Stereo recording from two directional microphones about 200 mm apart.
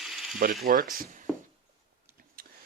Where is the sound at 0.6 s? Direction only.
45° right (ahead or behind).